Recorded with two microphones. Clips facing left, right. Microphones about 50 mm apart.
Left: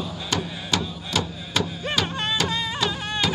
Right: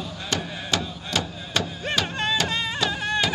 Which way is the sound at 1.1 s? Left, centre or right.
Centre.